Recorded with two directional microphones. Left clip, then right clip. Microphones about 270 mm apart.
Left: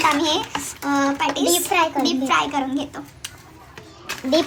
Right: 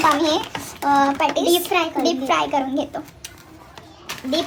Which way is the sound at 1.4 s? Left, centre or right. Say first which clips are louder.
Even; centre.